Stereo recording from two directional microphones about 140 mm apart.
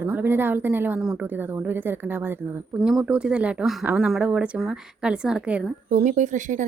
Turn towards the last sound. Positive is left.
turn(degrees=-65)  # may be behind; listen again after turning